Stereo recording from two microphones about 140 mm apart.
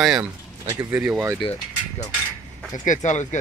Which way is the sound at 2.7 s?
60° left (ahead or behind).